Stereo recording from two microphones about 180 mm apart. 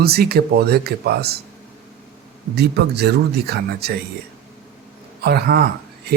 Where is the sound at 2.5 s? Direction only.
65° right (ahead or behind).